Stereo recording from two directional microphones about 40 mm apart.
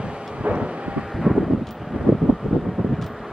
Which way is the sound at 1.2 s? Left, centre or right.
Centre.